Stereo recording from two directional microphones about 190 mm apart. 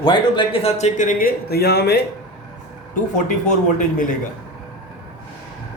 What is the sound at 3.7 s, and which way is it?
Speech, 45° left (ahead or behind).